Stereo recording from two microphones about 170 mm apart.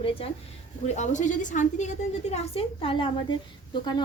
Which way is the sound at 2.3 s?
35° left (ahead or behind).